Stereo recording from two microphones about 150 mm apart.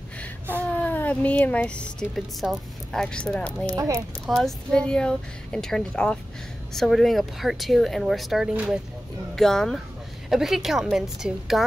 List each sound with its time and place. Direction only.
0.6 s speech: 10° left (ahead or behind)
3.7 s speech: 20° right (ahead or behind)
4.3 s speech: centre (ahead or behind)